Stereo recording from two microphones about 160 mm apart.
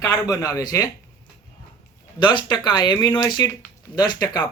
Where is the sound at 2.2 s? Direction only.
30° left (ahead or behind).